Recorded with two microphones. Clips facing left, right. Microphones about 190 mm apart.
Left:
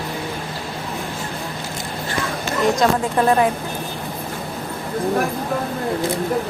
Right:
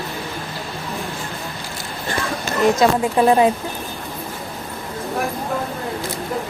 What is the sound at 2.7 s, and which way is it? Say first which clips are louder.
Speech: right 2 dB; 15° right (ahead or behind).